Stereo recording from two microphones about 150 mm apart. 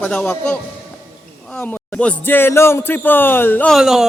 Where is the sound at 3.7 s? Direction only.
5° right (ahead or behind).